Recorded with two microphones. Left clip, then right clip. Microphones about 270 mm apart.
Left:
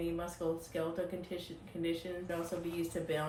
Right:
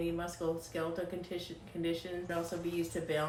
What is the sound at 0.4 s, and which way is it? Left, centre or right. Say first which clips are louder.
A woman's voice: even; centre.